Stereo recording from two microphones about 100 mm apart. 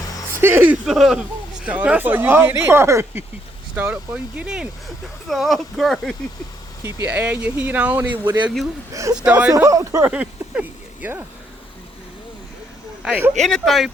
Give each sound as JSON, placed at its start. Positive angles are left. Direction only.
{"t": 0.4, "sound": "speech", "side_deg": -20}
{"t": 0.9, "sound": "speech", "side_deg": -5}
{"t": 3.8, "sound": "speech", "side_deg": -15}
{"t": 7.1, "sound": "speech", "side_deg": -15}
{"t": 8.9, "sound": "speech", "side_deg": -30}
{"t": 9.1, "sound": "speech", "side_deg": -15}
{"t": 9.5, "sound": "speech", "side_deg": -35}
{"t": 10.1, "sound": "speech", "side_deg": -10}
{"t": 13.1, "sound": "speech", "side_deg": -20}
{"t": 13.4, "sound": "speech", "side_deg": 0}